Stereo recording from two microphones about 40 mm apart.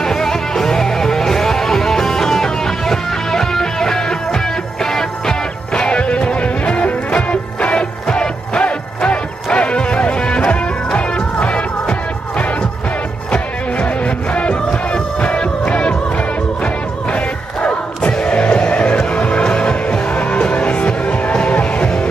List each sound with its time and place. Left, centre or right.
0.0 s music: centre
5.8 s music: left
14.3 s music: left
17.1 s music: left